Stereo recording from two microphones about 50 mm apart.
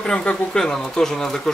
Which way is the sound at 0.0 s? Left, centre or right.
Centre.